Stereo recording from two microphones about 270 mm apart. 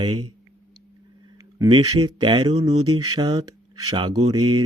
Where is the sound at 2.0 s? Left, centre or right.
Centre.